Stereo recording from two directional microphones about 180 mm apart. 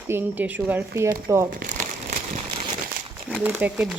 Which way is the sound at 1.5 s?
45° right (ahead or behind).